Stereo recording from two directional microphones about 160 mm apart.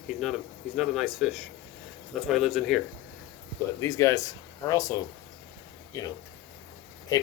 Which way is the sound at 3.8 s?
20° left (ahead or behind).